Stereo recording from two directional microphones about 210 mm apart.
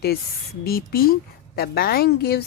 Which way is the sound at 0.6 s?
45° left (ahead or behind).